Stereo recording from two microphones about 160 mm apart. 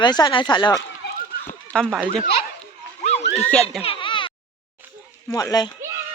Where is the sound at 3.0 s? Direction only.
40° left (ahead or behind).